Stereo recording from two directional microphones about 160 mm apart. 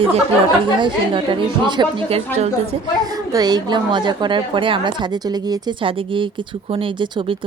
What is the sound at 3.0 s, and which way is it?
A woman's voice, 25° right (ahead or behind).